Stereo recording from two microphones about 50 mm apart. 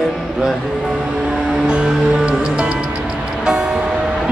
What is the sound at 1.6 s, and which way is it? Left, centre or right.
Music, centre.